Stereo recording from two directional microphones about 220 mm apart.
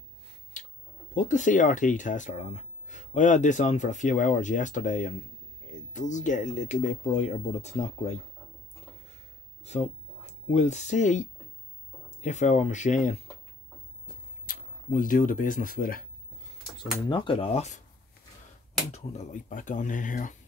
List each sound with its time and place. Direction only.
0.5 s a sound: 35° left (ahead or behind)
1.1 s speech: 35° left (ahead or behind)
9.7 s speech: 30° left (ahead or behind)
14.4 s speech: 40° left (ahead or behind)
17.1 s speech: 25° left (ahead or behind)
18.9 s speech: 30° left (ahead or behind)